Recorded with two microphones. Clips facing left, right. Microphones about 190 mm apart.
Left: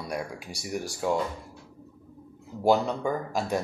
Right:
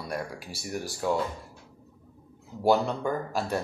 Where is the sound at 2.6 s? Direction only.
10° left (ahead or behind).